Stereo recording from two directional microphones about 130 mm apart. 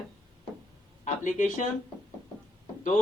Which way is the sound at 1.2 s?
75° left (ahead or behind).